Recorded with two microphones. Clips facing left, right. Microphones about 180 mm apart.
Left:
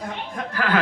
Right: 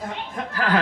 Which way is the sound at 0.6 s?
35° right (ahead or behind).